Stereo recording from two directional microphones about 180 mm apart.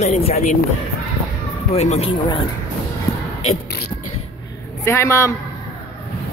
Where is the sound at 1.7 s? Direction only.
35° left (ahead or behind).